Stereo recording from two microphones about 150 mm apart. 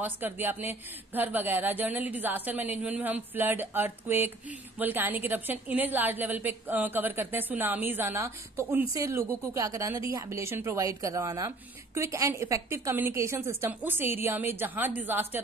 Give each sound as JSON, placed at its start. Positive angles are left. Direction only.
{"t": 0.0, "sound": "a woman's voice", "side_deg": -10}